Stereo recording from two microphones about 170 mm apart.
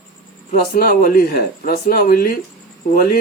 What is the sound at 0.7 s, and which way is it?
Speech, 55° left (ahead or behind).